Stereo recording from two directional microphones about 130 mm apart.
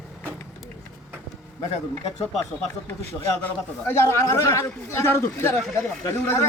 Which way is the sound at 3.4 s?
20° left (ahead or behind).